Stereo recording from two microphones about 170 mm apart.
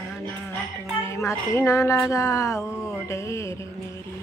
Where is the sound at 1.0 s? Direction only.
15° left (ahead or behind).